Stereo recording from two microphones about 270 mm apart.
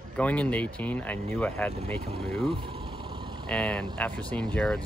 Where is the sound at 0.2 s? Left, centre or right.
Centre.